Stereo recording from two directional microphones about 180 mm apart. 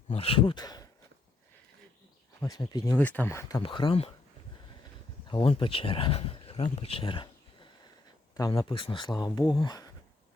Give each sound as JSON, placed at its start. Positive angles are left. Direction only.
{"t": 0.1, "sound": "speech", "side_deg": 30}
{"t": 2.4, "sound": "speech", "side_deg": 20}
{"t": 3.6, "sound": "speech", "side_deg": 25}
{"t": 5.3, "sound": "speech", "side_deg": 30}